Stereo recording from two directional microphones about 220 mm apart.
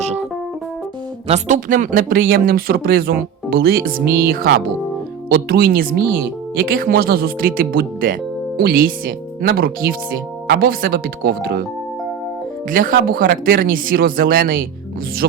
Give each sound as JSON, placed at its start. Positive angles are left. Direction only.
{"t": 1.3, "sound": "speech", "side_deg": -35}
{"t": 12.7, "sound": "speech", "side_deg": -40}